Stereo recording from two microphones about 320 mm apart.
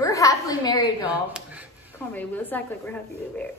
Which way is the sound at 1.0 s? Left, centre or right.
Centre.